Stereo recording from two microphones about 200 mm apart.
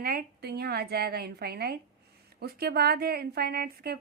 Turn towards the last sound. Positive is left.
turn(degrees=-50)  # may be behind; listen again after turning